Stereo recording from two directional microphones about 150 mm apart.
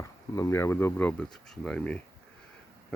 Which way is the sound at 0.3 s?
20° left (ahead or behind).